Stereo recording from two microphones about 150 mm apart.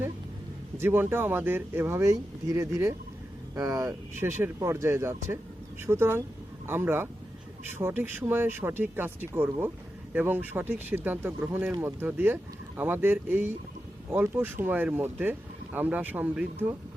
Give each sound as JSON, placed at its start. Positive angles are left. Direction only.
{"t": 0.8, "sound": "speech", "side_deg": -15}